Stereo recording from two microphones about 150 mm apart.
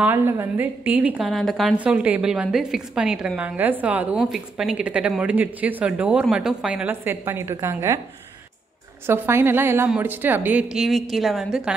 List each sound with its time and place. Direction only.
0.0 s a woman's voice: 15° right (ahead or behind)
9.0 s a woman's voice: 15° right (ahead or behind)